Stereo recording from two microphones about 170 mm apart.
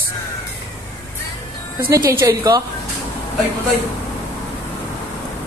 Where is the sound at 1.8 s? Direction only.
15° right (ahead or behind).